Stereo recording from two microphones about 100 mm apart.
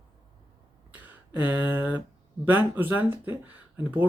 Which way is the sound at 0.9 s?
20° right (ahead or behind).